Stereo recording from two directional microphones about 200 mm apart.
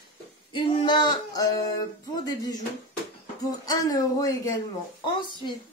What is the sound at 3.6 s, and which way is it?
Speech, 20° left (ahead or behind).